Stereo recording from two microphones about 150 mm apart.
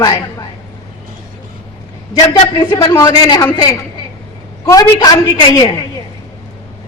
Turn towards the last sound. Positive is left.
turn(degrees=25)  # may be behind; listen again after turning